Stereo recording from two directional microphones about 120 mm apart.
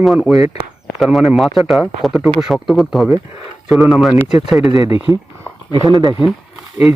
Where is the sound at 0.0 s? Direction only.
Centre (ahead or behind).